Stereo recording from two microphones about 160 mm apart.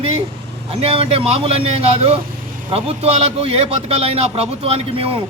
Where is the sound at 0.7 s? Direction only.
40° right (ahead or behind).